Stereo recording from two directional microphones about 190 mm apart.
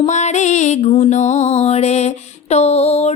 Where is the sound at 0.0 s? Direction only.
35° left (ahead or behind).